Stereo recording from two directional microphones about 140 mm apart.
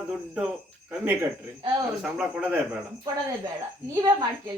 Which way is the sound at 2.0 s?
5° right (ahead or behind).